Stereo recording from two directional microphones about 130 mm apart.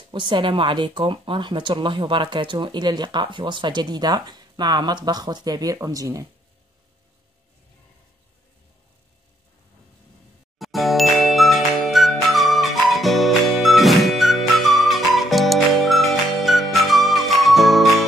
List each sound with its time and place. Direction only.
0.1 s speech: 40° right (ahead or behind)
10.6 s music: centre (ahead or behind)